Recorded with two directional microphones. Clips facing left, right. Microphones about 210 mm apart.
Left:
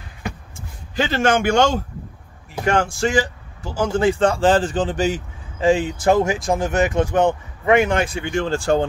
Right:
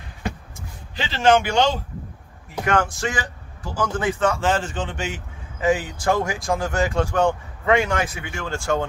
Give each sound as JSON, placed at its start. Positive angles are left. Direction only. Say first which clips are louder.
{"t": 0.9, "sound": "a man's voice", "louder": "even", "side_deg": 50}
{"t": 2.6, "sound": "speech", "louder": "left 3 dB", "side_deg": 30}